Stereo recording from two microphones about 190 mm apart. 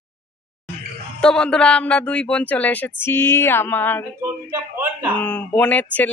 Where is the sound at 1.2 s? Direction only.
5° left (ahead or behind).